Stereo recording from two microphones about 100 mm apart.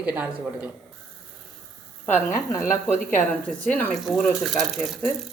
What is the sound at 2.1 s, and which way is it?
Speech, 30° left (ahead or behind).